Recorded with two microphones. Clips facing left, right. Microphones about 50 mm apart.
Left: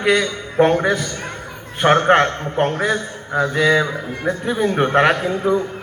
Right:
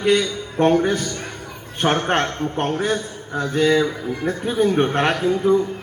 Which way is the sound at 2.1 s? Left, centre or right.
Left.